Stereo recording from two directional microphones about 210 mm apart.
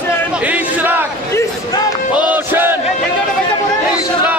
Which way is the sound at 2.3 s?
10° right (ahead or behind).